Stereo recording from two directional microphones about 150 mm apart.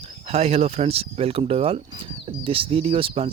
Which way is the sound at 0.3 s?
45° right (ahead or behind).